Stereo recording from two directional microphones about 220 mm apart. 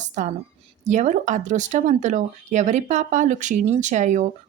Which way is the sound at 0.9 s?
30° right (ahead or behind).